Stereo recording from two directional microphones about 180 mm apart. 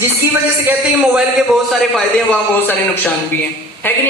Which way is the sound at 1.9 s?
5° left (ahead or behind).